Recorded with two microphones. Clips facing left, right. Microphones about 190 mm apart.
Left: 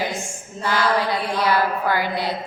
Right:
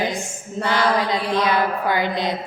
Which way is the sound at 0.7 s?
20° right (ahead or behind).